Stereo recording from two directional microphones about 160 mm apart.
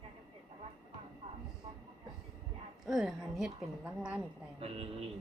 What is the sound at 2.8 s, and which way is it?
A woman's voice, 5° right (ahead or behind).